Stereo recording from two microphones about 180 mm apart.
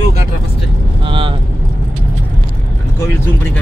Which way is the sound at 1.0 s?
30° right (ahead or behind).